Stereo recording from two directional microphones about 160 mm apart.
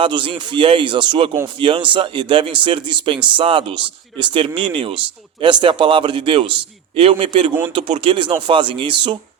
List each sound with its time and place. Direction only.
0.0 s speech: 30° right (ahead or behind)